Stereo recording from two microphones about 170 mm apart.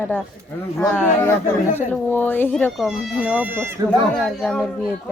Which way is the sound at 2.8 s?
10° right (ahead or behind).